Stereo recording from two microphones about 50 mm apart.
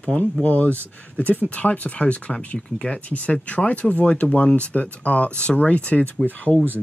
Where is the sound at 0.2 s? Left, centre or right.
Left.